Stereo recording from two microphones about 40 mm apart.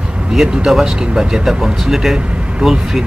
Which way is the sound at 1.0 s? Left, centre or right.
Right.